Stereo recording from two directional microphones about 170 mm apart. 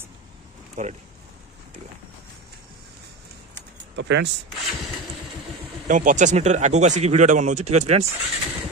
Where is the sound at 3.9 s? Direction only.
90° right.